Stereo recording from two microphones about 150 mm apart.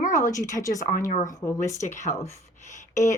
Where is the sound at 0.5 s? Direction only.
25° left (ahead or behind).